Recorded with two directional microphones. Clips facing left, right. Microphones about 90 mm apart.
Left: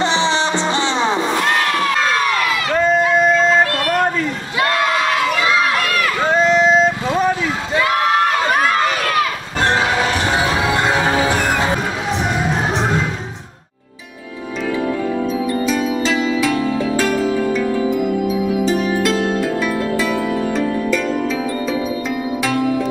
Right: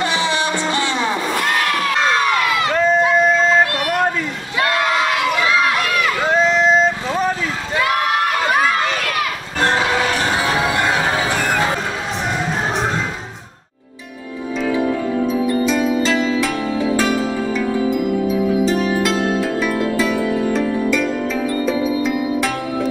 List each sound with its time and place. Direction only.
0.0 s music: 25° left (ahead or behind)
2.7 s a sound: centre (ahead or behind)
3.1 s yodeling: centre (ahead or behind)
3.9 s a sound: 5° right (ahead or behind)
6.2 s vehicle: centre (ahead or behind)
8.5 s run: centre (ahead or behind)
15.7 s music: centre (ahead or behind)